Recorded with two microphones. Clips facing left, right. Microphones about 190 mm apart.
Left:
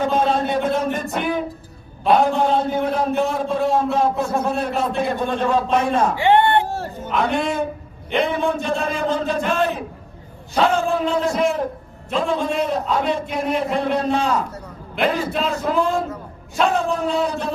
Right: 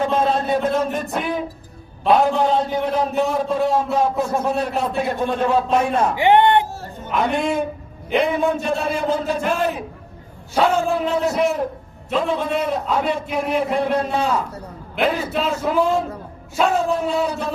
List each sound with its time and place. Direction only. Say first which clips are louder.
0.0 s a sound: even; centre (ahead or behind)
2.0 s a man's voice: even; centre (ahead or behind)
6.1 s music: right 3 dB; 15° right (ahead or behind)
7.1 s a man's voice: right 1 dB; 5° right (ahead or behind)